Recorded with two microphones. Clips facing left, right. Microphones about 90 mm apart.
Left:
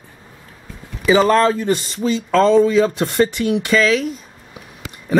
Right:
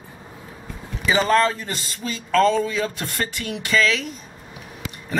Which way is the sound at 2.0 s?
25° left (ahead or behind).